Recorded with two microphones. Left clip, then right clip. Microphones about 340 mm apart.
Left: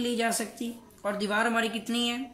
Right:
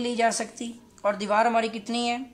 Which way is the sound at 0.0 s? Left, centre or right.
Centre.